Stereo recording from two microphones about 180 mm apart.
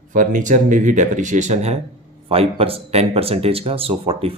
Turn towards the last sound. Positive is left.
turn(degrees=-30)  # may be behind; listen again after turning